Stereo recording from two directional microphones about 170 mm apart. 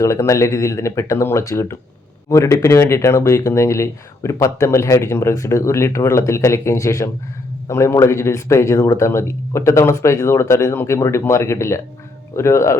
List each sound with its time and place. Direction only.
0.0 s speech: 20° left (ahead or behind)